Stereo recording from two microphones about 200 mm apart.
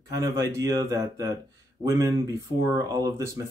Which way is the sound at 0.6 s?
15° right (ahead or behind).